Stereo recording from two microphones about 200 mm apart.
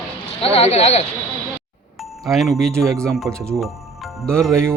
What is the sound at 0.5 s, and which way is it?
Speech, 30° left (ahead or behind).